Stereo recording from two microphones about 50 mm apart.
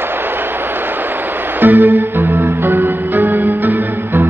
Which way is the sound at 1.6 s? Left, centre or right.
Right.